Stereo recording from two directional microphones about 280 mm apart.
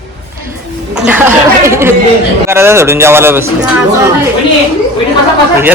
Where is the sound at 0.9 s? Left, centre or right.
Centre.